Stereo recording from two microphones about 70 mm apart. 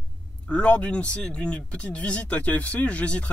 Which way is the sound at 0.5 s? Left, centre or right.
Centre.